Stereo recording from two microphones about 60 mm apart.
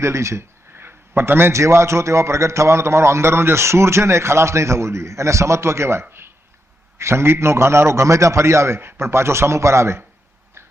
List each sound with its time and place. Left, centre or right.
0.0 s speech: right
0.8 s a man's voice: right
8.8 s a man's voice: right